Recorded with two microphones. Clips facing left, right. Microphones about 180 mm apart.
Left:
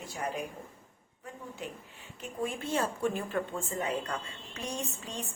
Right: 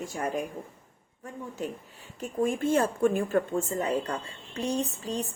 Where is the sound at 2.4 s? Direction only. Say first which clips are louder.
Right 7 dB; 50° right (ahead or behind).